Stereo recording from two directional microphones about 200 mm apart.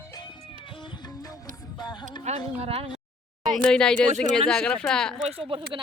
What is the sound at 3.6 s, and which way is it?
Speech, 5° left (ahead or behind).